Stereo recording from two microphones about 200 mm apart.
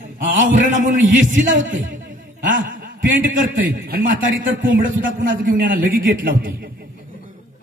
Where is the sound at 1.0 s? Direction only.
70° right (ahead or behind).